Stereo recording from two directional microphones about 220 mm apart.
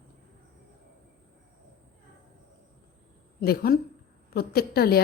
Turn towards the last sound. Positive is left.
turn(degrees=45)  # may be behind; listen again after turning